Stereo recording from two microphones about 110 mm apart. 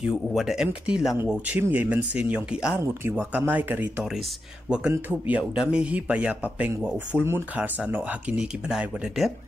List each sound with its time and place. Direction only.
0.1 s speech: centre (ahead or behind)
2.8 s speech: 25° right (ahead or behind); by 9.3 s 5° right (ahead or behind)